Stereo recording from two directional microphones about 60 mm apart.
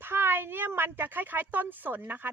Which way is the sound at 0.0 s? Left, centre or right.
Right.